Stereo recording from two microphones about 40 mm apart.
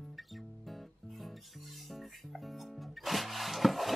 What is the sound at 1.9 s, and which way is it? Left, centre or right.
Music, centre.